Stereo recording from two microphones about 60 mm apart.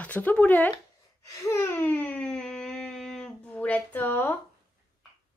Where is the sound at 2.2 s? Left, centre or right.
Centre.